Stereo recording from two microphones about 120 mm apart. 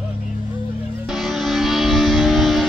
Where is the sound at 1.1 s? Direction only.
Centre (ahead or behind).